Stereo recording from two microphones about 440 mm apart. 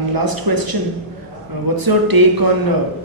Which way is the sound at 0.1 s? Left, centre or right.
Right.